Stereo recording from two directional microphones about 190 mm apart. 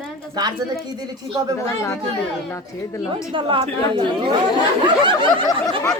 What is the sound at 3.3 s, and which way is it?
Speech, 25° right (ahead or behind).